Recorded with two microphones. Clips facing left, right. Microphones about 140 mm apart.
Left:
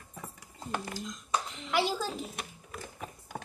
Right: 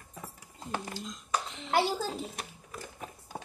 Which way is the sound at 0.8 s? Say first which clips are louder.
Left 1 dB; 25° right (ahead or behind).